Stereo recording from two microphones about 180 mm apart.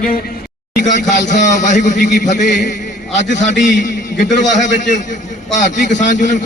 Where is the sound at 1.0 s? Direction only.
40° left (ahead or behind).